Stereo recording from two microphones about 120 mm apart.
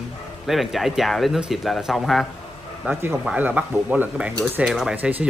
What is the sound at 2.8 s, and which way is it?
Speech, 20° right (ahead or behind).